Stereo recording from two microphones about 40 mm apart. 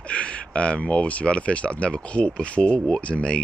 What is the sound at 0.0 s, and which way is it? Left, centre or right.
Speech, left.